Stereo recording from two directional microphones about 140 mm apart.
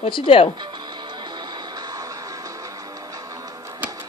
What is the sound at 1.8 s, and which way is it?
Music, 30° right (ahead or behind).